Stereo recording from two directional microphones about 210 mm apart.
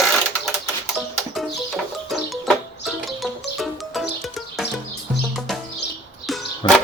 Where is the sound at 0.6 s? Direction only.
Centre (ahead or behind).